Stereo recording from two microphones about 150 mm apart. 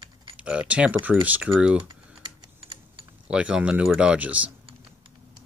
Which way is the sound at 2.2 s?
35° right (ahead or behind).